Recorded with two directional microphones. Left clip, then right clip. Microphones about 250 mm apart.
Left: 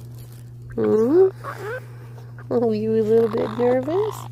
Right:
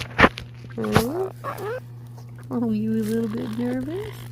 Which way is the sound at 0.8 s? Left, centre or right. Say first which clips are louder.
Left 8 dB; left.